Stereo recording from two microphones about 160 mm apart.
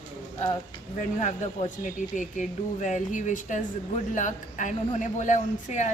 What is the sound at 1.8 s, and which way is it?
Speech, 50° left (ahead or behind).